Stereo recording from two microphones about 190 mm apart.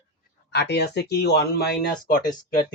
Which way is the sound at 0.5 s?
60° left (ahead or behind).